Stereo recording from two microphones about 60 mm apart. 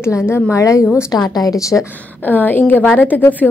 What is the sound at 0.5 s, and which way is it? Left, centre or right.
Speech, left.